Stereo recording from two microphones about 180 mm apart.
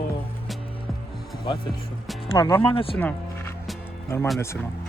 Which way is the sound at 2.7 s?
30° left (ahead or behind).